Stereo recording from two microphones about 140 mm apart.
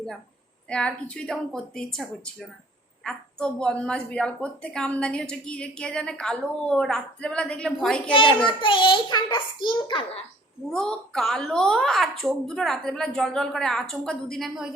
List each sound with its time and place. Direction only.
0.7 s a woman's voice: 5° left (ahead or behind)
8.1 s a child's voice: 40° left (ahead or behind)
10.7 s a child's voice: 5° left (ahead or behind)